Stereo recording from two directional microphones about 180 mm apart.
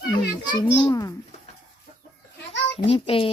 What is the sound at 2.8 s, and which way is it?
Child singing, 30° left (ahead or behind).